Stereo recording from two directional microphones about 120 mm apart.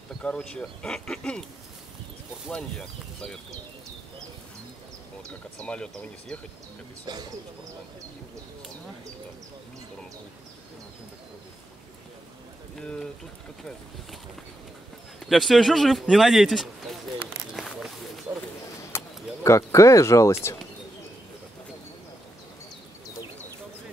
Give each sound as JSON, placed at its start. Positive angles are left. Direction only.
{"t": 0.2, "sound": "speech", "side_deg": 10}
{"t": 2.5, "sound": "speech", "side_deg": 5}
{"t": 5.6, "sound": "speech", "side_deg": 5}
{"t": 7.1, "sound": "speech", "side_deg": -35}
{"t": 12.7, "sound": "a man's voice", "side_deg": 5}
{"t": 15.1, "sound": "a man's voice", "side_deg": 0}
{"t": 17.6, "sound": "a sound", "side_deg": 0}
{"t": 18.8, "sound": "bird", "side_deg": 25}